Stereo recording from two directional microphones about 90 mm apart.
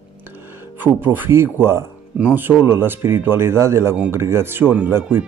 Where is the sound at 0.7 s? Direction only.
20° right (ahead or behind).